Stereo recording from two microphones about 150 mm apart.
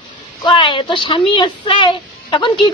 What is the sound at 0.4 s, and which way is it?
Speech, 30° left (ahead or behind).